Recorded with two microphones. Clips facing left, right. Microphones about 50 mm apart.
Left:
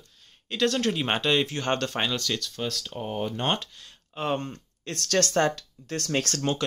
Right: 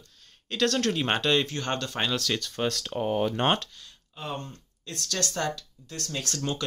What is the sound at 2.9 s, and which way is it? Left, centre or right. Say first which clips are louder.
Speech: right 4 dB; right.